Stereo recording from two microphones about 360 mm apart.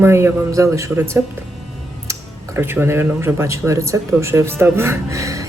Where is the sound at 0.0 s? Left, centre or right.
Centre.